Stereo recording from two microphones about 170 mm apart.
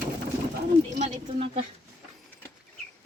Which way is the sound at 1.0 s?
35° right (ahead or behind).